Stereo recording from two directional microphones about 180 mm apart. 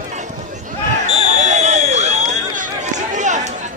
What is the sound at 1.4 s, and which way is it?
Run, 40° right (ahead or behind).